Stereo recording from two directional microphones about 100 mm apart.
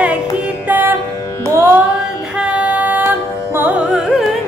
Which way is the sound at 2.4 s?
15° right (ahead or behind).